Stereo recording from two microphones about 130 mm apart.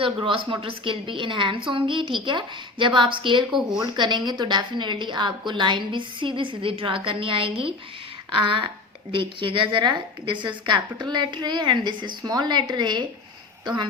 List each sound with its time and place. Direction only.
0.0 s a woman's voice: 45° right (ahead or behind)
3.5 s speech: centre (ahead or behind)
3.9 s a woman's voice: 35° right (ahead or behind)